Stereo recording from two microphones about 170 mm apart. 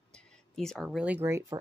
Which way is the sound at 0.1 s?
5° left (ahead or behind).